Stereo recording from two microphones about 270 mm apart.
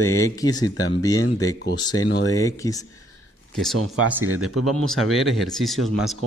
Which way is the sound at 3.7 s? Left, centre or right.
Right.